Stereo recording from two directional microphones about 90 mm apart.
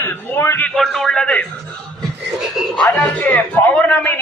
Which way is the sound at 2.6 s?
5° right (ahead or behind).